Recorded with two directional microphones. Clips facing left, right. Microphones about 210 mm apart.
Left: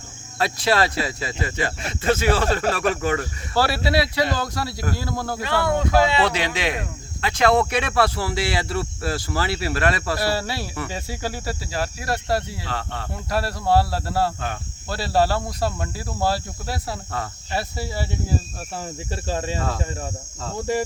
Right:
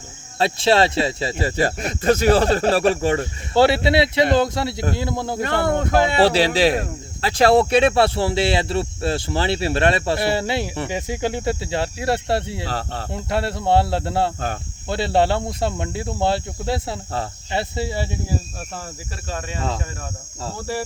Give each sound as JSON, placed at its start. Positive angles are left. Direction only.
{"t": 0.3, "sound": "speech", "side_deg": -25}
{"t": 5.6, "sound": "speech", "side_deg": -50}
{"t": 6.2, "sound": "speech", "side_deg": -30}
{"t": 13.1, "sound": "speech", "side_deg": -25}
{"t": 19.3, "sound": "speech", "side_deg": 30}